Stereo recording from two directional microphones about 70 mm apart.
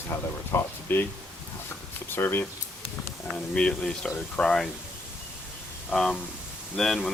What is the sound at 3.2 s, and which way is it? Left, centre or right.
Speech, centre.